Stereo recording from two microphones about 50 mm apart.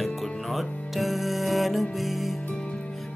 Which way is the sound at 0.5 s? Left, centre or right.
Centre.